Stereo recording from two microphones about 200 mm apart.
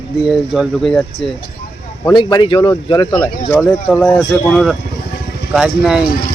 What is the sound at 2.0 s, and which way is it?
Speech, 20° left (ahead or behind).